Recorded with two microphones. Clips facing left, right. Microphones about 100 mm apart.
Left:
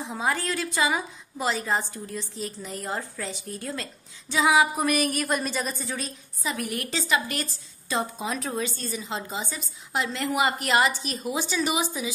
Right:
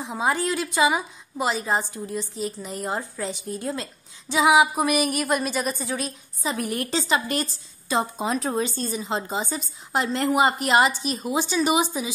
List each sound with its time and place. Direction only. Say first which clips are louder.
0.0 s a woman's voice: right 3 dB; 20° right (ahead or behind)
6.4 s a woman's voice: right 3 dB; 30° right (ahead or behind)